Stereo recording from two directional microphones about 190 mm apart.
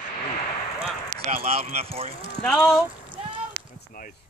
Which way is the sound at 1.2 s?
35° right (ahead or behind).